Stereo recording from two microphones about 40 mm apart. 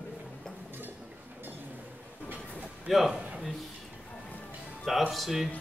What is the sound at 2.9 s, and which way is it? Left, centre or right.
Speech, centre.